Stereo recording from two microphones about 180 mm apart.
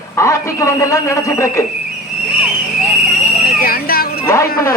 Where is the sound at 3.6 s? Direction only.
55° left (ahead or behind).